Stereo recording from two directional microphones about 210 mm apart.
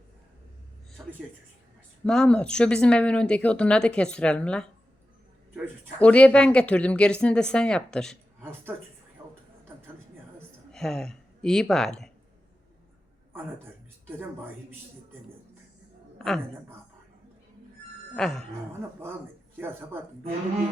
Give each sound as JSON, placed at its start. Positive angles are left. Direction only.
{"t": 2.0, "sound": "speech", "side_deg": 5}
{"t": 10.7, "sound": "speech", "side_deg": 0}
{"t": 16.1, "sound": "a sound", "side_deg": 0}
{"t": 18.2, "sound": "speech", "side_deg": 0}
{"t": 19.5, "sound": "speech", "side_deg": -10}